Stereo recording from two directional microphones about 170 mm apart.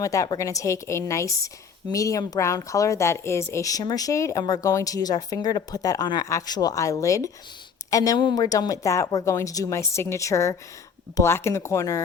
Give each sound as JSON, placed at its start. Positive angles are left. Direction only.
{"t": 0.0, "sound": "a woman's voice", "side_deg": 20}